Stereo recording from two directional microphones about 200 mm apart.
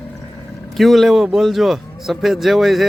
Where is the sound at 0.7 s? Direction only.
Centre (ahead or behind).